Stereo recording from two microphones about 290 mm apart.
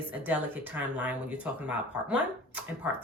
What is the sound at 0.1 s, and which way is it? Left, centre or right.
A woman's voice, centre.